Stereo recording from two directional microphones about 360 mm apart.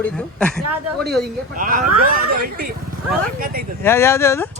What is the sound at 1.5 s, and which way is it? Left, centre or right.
Speech, right.